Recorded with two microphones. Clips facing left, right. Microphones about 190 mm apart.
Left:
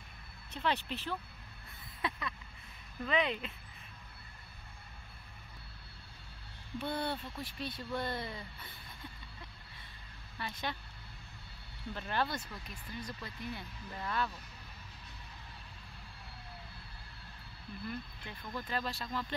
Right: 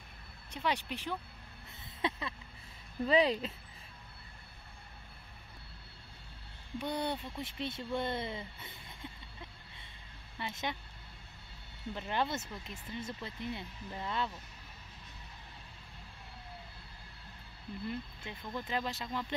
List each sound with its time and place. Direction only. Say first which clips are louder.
0.5 s speech: even; 10° right (ahead or behind)
2.0 s speech: right 3 dB; 25° right (ahead or behind)
6.8 s speech: right 1 dB; 15° right (ahead or behind)
10.3 s speech: right 1 dB; 20° right (ahead or behind)
11.9 s speech: right 1 dB; 20° right (ahead or behind)
17.8 s speech: right 2 dB; 20° right (ahead or behind)